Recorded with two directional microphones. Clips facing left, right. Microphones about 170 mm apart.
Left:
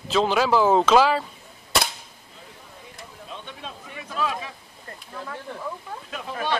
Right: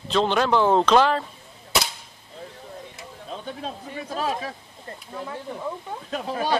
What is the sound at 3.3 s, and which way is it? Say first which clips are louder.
Speech: right 6 dB; 40° right (ahead or behind).